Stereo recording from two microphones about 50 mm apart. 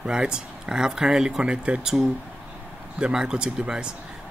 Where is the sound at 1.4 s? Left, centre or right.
Right.